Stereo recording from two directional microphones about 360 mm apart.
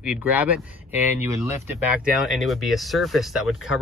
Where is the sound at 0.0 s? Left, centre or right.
Centre.